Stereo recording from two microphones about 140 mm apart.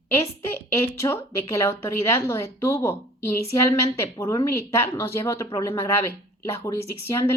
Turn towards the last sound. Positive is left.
turn(degrees=20)  # may be behind; listen again after turning